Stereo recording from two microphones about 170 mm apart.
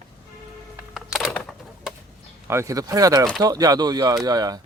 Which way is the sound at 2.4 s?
15° right (ahead or behind).